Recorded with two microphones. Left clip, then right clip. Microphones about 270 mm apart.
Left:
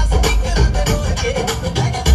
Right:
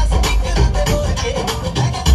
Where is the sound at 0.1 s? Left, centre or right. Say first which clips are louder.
Left 3 dB; right.